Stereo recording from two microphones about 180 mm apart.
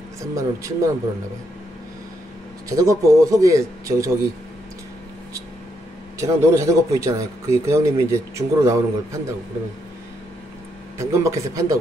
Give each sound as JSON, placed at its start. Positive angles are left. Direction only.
{"t": 0.2, "sound": "speech", "side_deg": -15}
{"t": 2.7, "sound": "speech", "side_deg": -20}
{"t": 6.1, "sound": "speech", "side_deg": -15}
{"t": 11.0, "sound": "speech", "side_deg": -15}